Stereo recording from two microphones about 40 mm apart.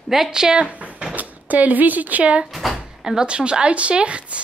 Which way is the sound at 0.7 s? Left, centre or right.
Right.